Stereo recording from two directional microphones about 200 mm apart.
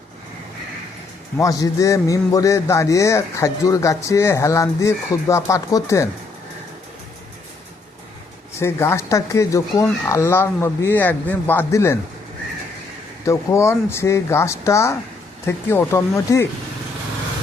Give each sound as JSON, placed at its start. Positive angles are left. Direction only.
{"t": 1.4, "sound": "a man's voice", "side_deg": 15}
{"t": 8.5, "sound": "a man's voice", "side_deg": 15}
{"t": 13.2, "sound": "a man's voice", "side_deg": 15}